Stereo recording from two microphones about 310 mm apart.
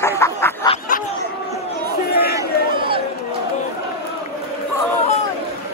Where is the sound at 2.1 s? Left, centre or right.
Left.